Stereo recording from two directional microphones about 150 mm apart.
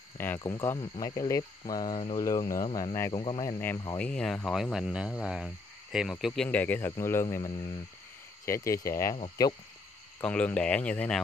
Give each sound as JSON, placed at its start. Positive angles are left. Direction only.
{"t": 0.4, "sound": "speech", "side_deg": 20}
{"t": 3.6, "sound": "speech", "side_deg": 15}
{"t": 4.1, "sound": "speech", "side_deg": 5}
{"t": 10.2, "sound": "speech", "side_deg": 10}